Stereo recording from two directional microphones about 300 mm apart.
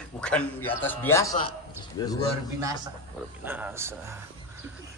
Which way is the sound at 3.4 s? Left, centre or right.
Centre.